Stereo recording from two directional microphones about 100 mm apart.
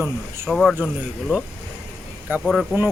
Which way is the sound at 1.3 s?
20° right (ahead or behind).